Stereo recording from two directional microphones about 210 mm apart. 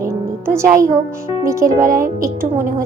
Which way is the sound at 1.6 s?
40° right (ahead or behind).